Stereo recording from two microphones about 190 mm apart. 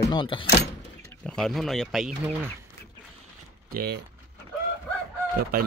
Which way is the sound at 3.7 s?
55° right (ahead or behind).